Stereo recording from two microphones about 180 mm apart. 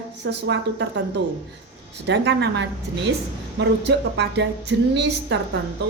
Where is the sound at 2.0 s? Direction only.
80° right.